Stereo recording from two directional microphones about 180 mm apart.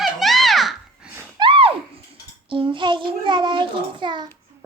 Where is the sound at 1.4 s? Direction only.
30° right (ahead or behind).